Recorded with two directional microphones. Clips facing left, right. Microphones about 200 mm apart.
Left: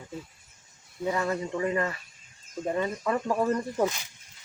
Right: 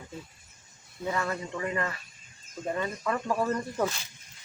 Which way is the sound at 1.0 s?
20° left (ahead or behind).